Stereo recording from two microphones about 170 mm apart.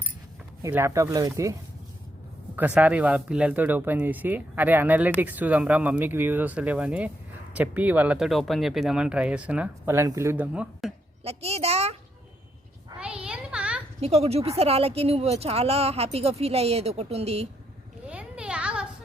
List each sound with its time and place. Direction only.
0.6 s speech: 15° right (ahead or behind)
2.6 s speech: 10° right (ahead or behind)
11.2 s speech: 35° right (ahead or behind)
13.0 s a sound: 5° right (ahead or behind)
14.0 s speech: 40° right (ahead or behind)
18.0 s a sound: 5° right (ahead or behind)